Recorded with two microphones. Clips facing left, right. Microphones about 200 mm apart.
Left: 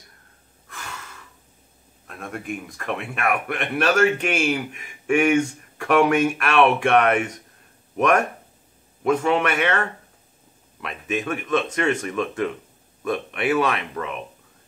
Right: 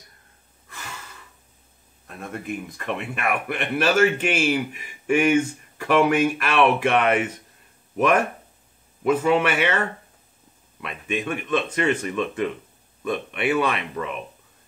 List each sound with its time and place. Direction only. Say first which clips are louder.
2.0 s speech: even; centre (ahead or behind)
9.0 s speech: right 1 dB; 5° right (ahead or behind)